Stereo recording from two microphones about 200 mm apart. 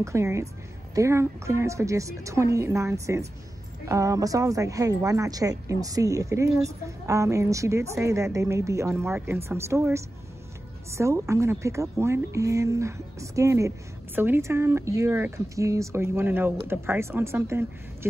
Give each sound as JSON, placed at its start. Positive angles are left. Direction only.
{"t": 0.0, "sound": "a woman's voice", "side_deg": -15}